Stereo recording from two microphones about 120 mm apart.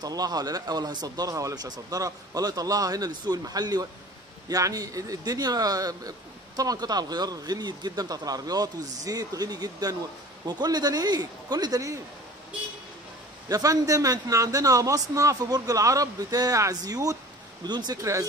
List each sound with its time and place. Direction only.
0.0 s speech: 30° right (ahead or behind)
13.5 s speech: 30° right (ahead or behind)